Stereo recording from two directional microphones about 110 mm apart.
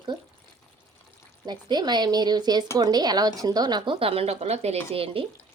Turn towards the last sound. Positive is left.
turn(degrees=-55)  # may be behind; listen again after turning